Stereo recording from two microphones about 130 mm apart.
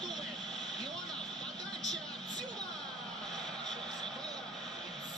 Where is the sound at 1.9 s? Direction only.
5° left (ahead or behind).